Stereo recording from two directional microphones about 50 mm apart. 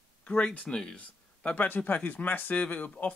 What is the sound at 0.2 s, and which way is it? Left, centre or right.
Speech, left.